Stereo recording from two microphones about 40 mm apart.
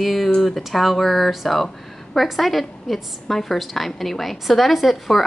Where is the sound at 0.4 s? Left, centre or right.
Centre.